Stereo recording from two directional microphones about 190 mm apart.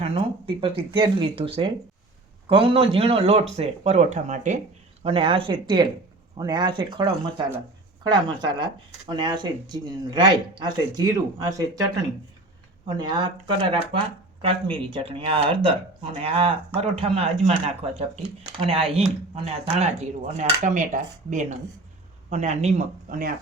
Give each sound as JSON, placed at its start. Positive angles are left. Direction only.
{"t": 0.0, "sound": "speech", "side_deg": -30}
{"t": 5.0, "sound": "speech", "side_deg": -30}
{"t": 13.0, "sound": "speech", "side_deg": -20}
{"t": 18.6, "sound": "speech", "side_deg": -30}